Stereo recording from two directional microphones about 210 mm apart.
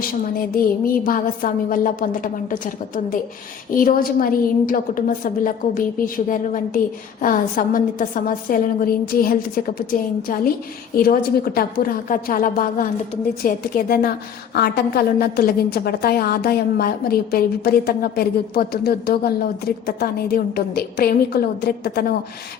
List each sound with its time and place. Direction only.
0.3 s a woman's voice: 45° left (ahead or behind)